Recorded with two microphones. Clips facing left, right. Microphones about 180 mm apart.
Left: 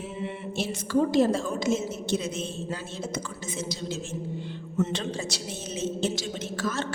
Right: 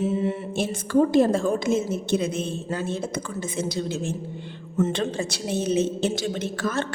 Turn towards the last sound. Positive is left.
turn(degrees=-55)  # may be behind; listen again after turning